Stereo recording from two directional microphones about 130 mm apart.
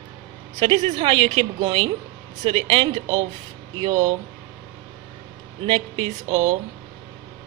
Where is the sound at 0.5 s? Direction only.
40° right (ahead or behind).